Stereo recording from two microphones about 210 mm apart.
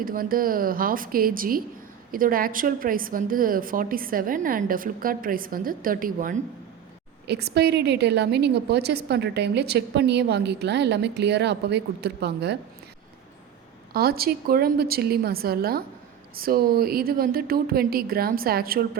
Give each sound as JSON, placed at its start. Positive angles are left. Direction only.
{"t": 0.0, "sound": "a woman's voice", "side_deg": -45}
{"t": 13.9, "sound": "a woman's voice", "side_deg": -45}